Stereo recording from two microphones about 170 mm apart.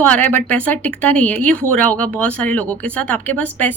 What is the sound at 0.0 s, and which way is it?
Speech, 10° left (ahead or behind).